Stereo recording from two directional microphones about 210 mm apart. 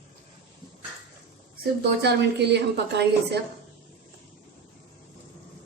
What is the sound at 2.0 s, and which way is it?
A woman's voice, 50° right (ahead or behind).